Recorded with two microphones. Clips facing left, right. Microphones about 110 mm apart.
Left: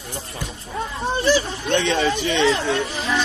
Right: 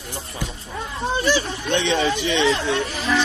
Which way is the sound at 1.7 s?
45° left (ahead or behind).